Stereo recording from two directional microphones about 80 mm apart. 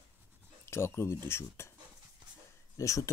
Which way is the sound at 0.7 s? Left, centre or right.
Left.